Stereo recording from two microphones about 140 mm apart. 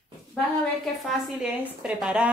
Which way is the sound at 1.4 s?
5° right (ahead or behind).